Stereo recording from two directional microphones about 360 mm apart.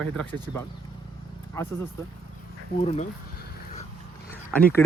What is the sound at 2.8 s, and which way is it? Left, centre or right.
Speech, centre.